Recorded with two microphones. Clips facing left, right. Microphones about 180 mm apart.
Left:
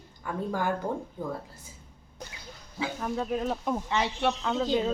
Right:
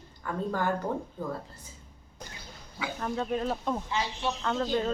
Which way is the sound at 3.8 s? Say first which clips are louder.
Left 4 dB; 65° left (ahead or behind).